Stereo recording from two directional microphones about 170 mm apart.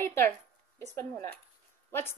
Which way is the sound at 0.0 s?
15° left (ahead or behind).